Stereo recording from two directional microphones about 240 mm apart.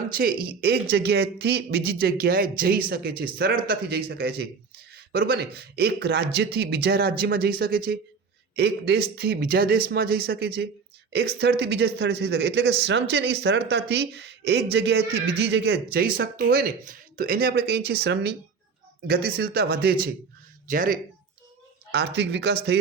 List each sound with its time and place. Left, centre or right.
0.1 s speech: right